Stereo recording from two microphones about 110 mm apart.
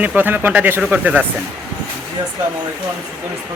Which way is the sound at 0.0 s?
15° right (ahead or behind).